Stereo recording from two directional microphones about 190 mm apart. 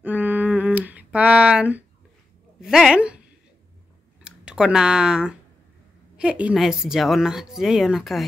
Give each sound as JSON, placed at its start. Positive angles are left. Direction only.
{"t": 0.0, "sound": "humming", "side_deg": -10}
{"t": 2.6, "sound": "speech", "side_deg": 0}
{"t": 4.2, "sound": "speech", "side_deg": -5}